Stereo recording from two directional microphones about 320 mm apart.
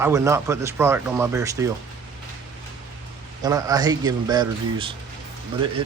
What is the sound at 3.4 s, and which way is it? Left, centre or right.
Speech, centre.